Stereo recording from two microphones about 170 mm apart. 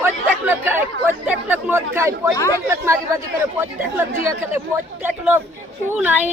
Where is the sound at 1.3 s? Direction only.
10° right (ahead or behind).